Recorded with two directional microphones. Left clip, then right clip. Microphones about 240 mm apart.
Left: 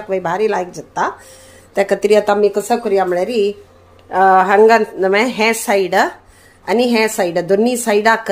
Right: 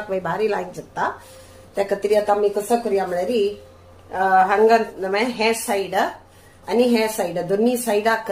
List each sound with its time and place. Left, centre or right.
0.1 s a woman's voice: left